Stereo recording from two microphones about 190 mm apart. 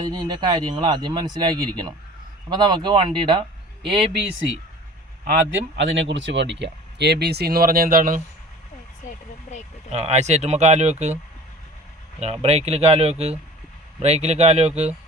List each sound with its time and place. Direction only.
0.0 s speech: 20° right (ahead or behind)
5.7 s speech: 70° right (ahead or behind); by 8.2 s 45° right (ahead or behind)
9.0 s speech: 40° left (ahead or behind)
9.9 s speech: 35° right (ahead or behind)
12.2 s speech: 35° right (ahead or behind)